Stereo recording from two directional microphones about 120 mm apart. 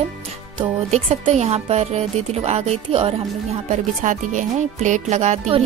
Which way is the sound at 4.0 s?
90° right.